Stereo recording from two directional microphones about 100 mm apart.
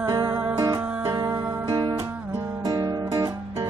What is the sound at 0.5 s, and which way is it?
Music, 40° right (ahead or behind).